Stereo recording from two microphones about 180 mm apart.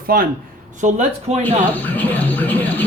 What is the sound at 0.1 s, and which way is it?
Speech, 60° right (ahead or behind).